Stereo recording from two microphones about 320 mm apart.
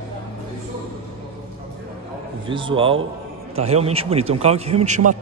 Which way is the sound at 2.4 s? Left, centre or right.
Centre.